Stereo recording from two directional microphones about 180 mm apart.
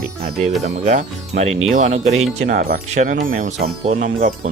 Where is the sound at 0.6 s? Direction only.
40° right (ahead or behind).